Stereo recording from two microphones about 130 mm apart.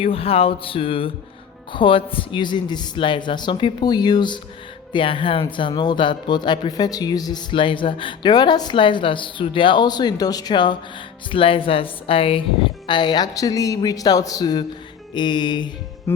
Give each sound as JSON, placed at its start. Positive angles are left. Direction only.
{"t": 0.0, "sound": "a sound", "side_deg": 45}
{"t": 1.7, "sound": "speech", "side_deg": 40}
{"t": 16.1, "sound": "speech", "side_deg": 20}